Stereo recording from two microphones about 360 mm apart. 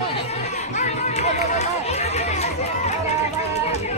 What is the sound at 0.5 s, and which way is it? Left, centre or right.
Run, centre.